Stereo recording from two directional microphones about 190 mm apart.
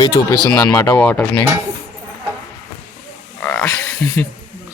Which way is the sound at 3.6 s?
10° left (ahead or behind).